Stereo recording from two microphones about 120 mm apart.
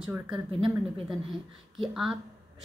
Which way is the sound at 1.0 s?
Centre (ahead or behind).